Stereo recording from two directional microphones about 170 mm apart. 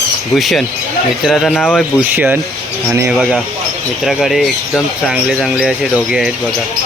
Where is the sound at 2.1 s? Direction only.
10° right (ahead or behind).